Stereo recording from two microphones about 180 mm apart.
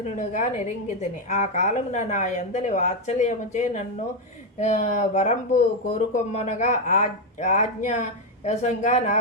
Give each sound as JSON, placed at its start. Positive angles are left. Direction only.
{"t": 0.2, "sound": "a woman's voice", "side_deg": 45}